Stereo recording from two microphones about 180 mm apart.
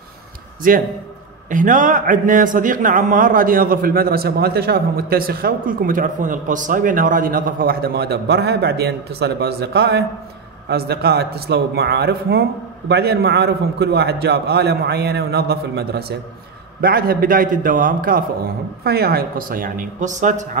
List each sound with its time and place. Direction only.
0.6 s a man's voice: 50° right (ahead or behind)